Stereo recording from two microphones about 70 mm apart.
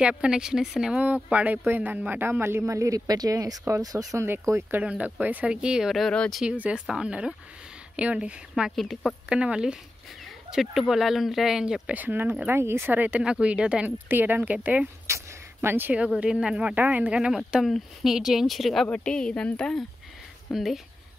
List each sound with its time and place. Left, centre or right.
0.2 s speech: centre
1.0 s speech: right
4.2 s speech: right
4.8 s speech: centre
8.7 s speech: centre
9.3 s speech: centre
11.9 s speech: right
12.5 s speech: right
12.9 s speech: right
13.8 s speech: right
15.0 s a sound: right
15.9 s speech: centre
18.9 s a woman's voice: centre
20.4 s speech: centre